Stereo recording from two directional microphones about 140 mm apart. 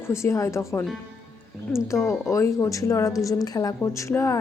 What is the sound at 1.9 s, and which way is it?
A woman's voice, 20° left (ahead or behind).